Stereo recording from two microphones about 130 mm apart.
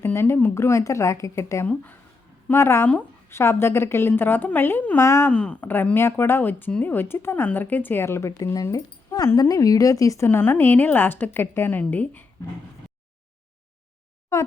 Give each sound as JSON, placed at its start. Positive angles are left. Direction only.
{"t": 0.0, "sound": "speech", "side_deg": 20}
{"t": 1.6, "sound": "speech", "side_deg": 10}
{"t": 5.3, "sound": "speech", "side_deg": 10}